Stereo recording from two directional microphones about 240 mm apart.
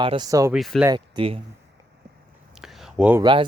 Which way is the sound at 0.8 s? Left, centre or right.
Centre.